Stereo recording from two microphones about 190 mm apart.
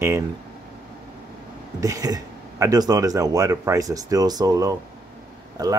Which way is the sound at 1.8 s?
20° right (ahead or behind).